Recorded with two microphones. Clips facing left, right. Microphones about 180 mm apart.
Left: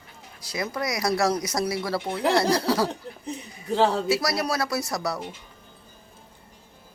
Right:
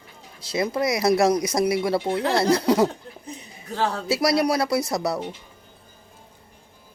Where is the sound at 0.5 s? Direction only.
25° right (ahead or behind).